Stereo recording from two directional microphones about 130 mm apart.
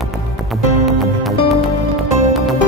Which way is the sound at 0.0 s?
Centre (ahead or behind).